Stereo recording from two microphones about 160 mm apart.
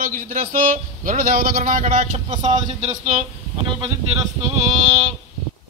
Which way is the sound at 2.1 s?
45° right (ahead or behind).